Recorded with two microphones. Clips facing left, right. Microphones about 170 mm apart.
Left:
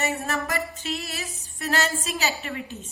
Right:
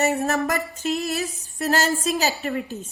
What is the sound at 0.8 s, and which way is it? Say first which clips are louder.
A woman's voice: right 8 dB; 45° right (ahead or behind).